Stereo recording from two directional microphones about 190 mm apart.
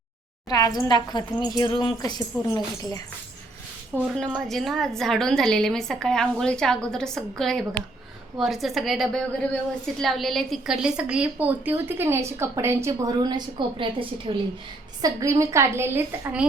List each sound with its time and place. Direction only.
0.4 s speech: 20° left (ahead or behind)
3.9 s a woman's voice: 10° right (ahead or behind)
4.4 s a woman's voice: centre (ahead or behind)